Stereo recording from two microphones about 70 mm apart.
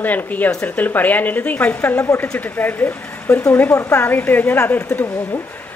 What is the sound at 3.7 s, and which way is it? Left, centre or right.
Speech, left.